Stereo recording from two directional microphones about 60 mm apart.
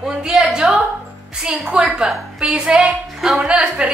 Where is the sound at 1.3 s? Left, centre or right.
Centre.